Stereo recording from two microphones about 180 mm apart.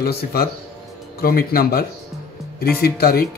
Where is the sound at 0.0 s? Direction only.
60° left (ahead or behind).